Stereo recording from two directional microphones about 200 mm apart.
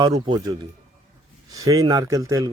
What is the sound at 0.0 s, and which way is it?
Speech, 20° right (ahead or behind).